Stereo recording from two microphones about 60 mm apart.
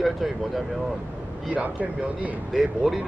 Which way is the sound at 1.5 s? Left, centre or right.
Right.